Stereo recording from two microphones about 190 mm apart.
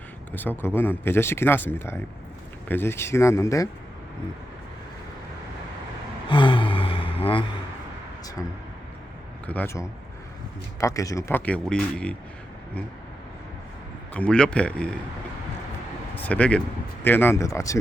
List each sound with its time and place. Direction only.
0.3 s speech: 10° left (ahead or behind)
6.2 s gasp: 25° left (ahead or behind)
9.5 s speech: 10° left (ahead or behind)
14.1 s speech: 5° left (ahead or behind)
16.1 s speech: 10° left (ahead or behind)